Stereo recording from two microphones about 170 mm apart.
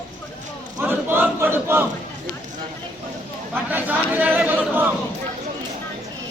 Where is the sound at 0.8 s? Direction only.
10° right (ahead or behind).